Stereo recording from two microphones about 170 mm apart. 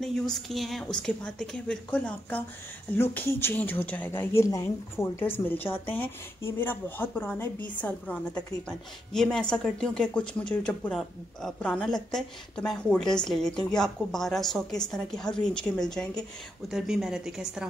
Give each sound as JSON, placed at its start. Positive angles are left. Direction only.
{"t": 0.0, "sound": "a woman's voice", "side_deg": 0}